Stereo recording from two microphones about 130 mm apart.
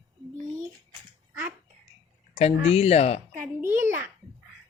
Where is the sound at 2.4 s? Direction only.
55° left (ahead or behind).